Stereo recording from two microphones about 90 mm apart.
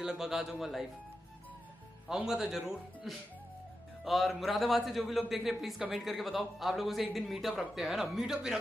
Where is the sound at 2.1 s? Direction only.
5° right (ahead or behind).